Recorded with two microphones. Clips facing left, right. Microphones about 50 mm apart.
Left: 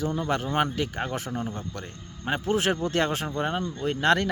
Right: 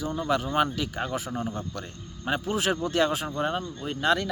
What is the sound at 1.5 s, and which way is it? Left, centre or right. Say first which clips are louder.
Speech: right 1 dB; left.